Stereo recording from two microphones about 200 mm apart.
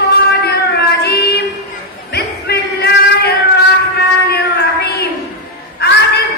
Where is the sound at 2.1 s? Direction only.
55° left (ahead or behind).